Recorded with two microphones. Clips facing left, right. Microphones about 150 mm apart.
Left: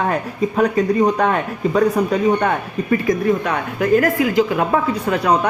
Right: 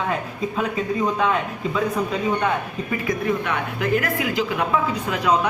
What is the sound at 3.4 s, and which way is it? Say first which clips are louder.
Speech: left 6 dB; 40° left (ahead or behind).